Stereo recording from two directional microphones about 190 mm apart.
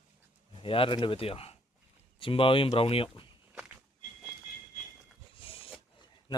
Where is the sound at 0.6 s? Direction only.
30° left (ahead or behind).